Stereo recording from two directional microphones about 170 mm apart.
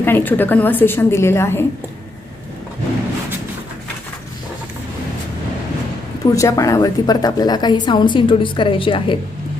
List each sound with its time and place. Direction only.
0.0 s a woman's voice: 10° left (ahead or behind)
6.3 s a woman's voice: 20° left (ahead or behind)